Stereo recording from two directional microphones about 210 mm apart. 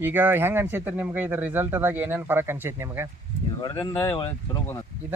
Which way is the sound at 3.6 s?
10° left (ahead or behind).